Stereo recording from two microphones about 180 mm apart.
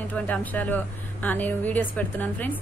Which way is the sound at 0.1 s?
10° left (ahead or behind).